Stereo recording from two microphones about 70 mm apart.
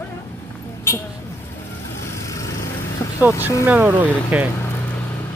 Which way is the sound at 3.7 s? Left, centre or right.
Right.